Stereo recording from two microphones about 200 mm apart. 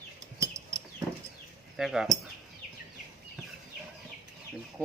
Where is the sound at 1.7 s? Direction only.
Centre (ahead or behind).